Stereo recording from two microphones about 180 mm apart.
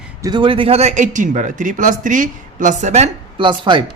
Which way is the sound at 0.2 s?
25° right (ahead or behind).